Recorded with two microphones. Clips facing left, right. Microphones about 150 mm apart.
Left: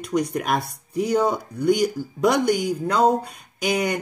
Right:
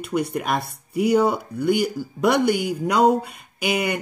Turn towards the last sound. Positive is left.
turn(degrees=-5)  # may be behind; listen again after turning